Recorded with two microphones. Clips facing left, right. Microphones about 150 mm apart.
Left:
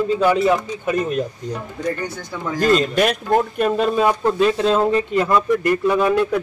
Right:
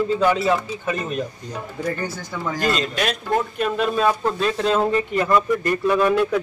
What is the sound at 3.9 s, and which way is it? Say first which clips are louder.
Speech: left 3 dB; 15° left (ahead or behind).